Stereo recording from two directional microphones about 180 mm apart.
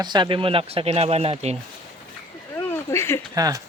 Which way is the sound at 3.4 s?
20° right (ahead or behind).